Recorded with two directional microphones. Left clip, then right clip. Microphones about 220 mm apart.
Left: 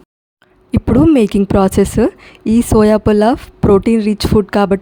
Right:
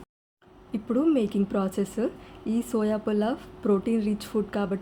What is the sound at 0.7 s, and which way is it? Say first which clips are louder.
A woman's voice: left 14 dB; 50° left (ahead or behind).